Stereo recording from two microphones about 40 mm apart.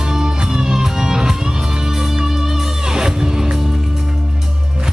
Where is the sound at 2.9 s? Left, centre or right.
Centre.